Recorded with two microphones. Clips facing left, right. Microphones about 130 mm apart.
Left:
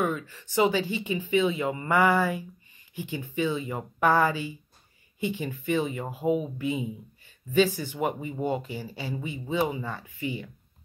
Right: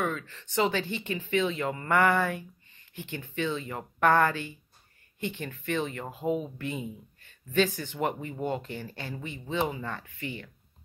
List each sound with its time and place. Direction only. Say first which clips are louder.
0.0 s speech: left 3 dB; 10° left (ahead or behind)